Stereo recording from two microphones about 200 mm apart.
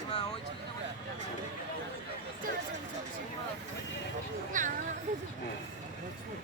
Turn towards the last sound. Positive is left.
turn(degrees=-40)  # may be behind; listen again after turning